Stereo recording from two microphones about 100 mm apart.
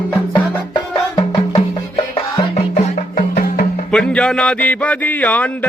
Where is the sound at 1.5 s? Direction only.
70° left (ahead or behind).